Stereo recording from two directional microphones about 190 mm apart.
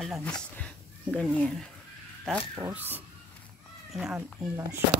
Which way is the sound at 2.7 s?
10° right (ahead or behind).